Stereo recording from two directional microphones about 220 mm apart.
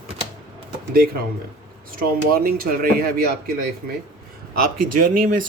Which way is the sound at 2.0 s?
40° right (ahead or behind).